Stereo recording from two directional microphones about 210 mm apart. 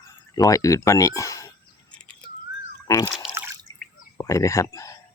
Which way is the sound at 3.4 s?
15° right (ahead or behind).